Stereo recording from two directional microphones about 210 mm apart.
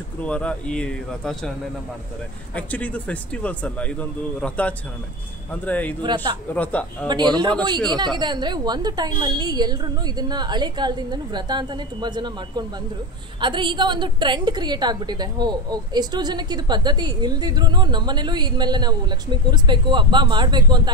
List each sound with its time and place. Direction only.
0.2 s speech: 5° left (ahead or behind)
2.5 s speech: 5° left (ahead or behind)
6.0 s a woman's voice: 20° right (ahead or behind)
6.5 s speech: 5° left (ahead or behind)
7.1 s a woman's voice: 20° right (ahead or behind)